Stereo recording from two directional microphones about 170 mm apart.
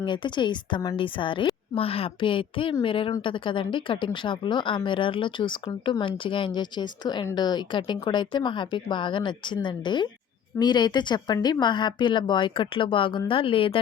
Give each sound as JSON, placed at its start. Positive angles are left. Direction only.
{"t": 0.0, "sound": "speech", "side_deg": 25}